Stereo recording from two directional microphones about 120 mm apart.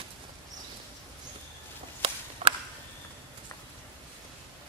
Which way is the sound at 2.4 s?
50° right (ahead or behind).